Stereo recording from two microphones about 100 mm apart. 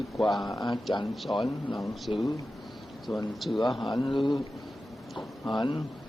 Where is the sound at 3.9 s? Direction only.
55° left (ahead or behind).